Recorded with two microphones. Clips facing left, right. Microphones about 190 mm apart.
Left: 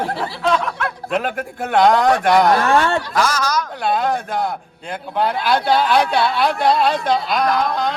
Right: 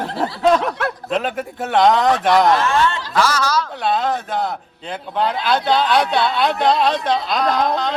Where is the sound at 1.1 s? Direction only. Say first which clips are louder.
Left 2 dB; centre (ahead or behind).